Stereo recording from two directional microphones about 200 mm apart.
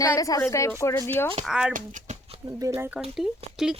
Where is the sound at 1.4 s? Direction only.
5° right (ahead or behind).